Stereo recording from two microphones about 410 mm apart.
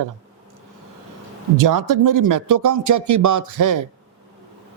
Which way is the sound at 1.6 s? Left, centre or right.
Right.